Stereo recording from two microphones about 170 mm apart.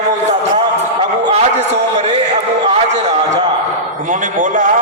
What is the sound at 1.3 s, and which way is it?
Speech, 40° right (ahead or behind).